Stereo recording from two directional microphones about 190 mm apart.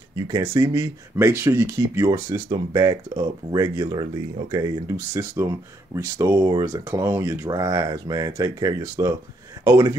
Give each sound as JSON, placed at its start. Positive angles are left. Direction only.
{"t": 0.3, "sound": "speech", "side_deg": -15}